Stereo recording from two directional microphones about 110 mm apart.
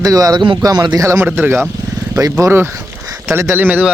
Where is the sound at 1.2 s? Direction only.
15° right (ahead or behind).